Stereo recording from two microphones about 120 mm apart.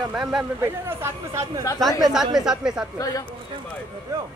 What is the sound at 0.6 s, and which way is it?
Speech, 20° right (ahead or behind).